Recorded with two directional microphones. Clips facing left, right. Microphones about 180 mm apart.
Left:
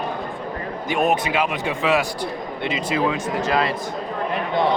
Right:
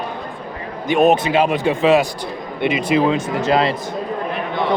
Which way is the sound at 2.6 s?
15° right (ahead or behind).